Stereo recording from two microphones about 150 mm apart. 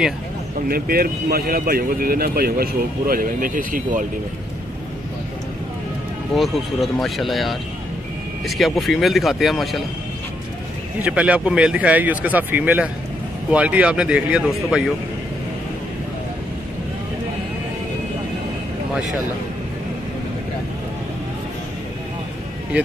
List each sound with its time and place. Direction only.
0.7 s speech: 80° right
6.3 s speech: centre (ahead or behind)
11.0 s speech: 10° right (ahead or behind)